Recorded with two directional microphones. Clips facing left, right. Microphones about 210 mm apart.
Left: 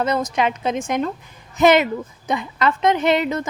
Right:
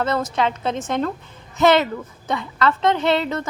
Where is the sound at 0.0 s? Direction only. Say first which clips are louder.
Left 1 dB; 15° left (ahead or behind).